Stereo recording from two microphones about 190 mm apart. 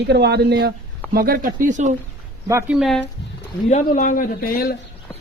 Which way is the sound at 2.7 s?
Centre (ahead or behind).